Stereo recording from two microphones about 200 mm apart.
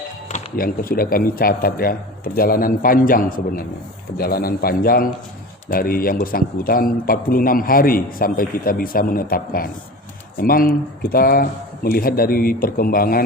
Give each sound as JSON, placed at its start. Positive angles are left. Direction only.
{"t": 0.5, "sound": "a man's voice", "side_deg": 45}